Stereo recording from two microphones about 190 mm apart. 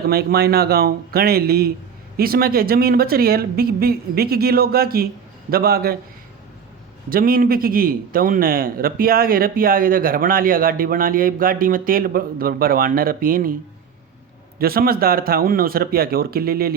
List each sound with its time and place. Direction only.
0.1 s a man's voice: 55° right (ahead or behind)
7.1 s a man's voice: 50° right (ahead or behind)
14.6 s a man's voice: 50° right (ahead or behind)